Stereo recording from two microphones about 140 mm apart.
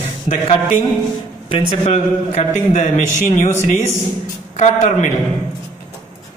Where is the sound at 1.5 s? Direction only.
50° left (ahead or behind).